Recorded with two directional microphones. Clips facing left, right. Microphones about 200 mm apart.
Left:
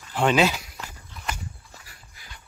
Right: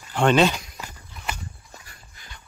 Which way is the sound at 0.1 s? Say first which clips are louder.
Right 2 dB; 5° left (ahead or behind).